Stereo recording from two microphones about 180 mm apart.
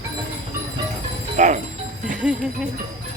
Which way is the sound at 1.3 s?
45° right (ahead or behind).